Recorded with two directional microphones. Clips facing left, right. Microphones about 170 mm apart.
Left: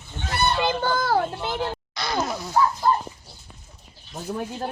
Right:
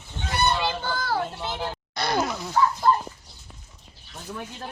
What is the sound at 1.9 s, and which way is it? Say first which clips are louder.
Speech: right 5 dB; 55° right (ahead or behind).